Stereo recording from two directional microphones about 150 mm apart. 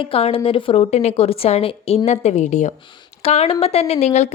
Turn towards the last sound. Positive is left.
turn(degrees=50)  # may be behind; listen again after turning